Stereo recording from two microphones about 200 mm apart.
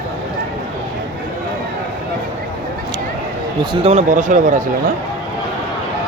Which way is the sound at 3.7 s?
30° right (ahead or behind).